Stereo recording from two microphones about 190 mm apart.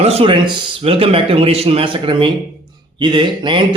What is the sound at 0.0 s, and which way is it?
A man's voice, 30° right (ahead or behind).